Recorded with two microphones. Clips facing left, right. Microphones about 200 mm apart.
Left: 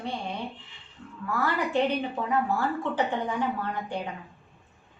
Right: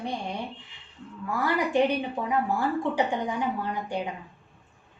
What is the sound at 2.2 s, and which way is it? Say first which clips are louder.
A woman's voice: even; 15° right (ahead or behind).